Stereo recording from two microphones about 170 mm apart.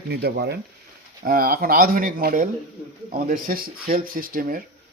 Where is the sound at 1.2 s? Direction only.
60° right (ahead or behind).